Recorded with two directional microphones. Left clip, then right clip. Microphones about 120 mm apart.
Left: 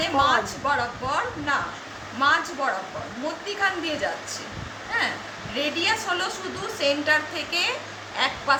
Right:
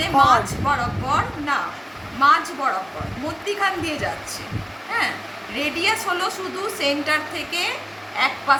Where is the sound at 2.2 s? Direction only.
35° left (ahead or behind).